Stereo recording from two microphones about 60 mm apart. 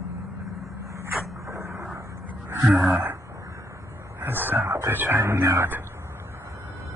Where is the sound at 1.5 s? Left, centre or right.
Right.